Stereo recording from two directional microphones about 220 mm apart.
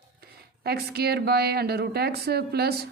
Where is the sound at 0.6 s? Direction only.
45° right (ahead or behind).